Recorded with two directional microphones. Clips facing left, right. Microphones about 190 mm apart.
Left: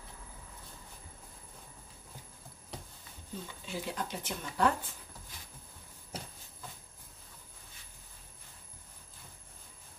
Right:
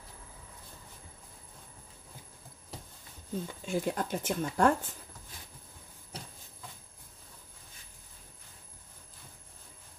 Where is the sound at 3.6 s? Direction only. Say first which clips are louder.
Right 6 dB; 50° right (ahead or behind).